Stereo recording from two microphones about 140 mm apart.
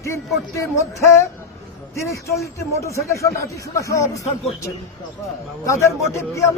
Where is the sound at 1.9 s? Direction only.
20° left (ahead or behind).